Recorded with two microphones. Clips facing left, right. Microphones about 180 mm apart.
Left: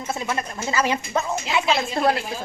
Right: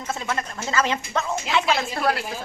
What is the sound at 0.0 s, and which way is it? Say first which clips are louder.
Speech: left 1 dB; 15° left (ahead or behind).